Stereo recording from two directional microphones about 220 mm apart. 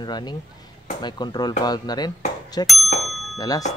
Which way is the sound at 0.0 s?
20° left (ahead or behind).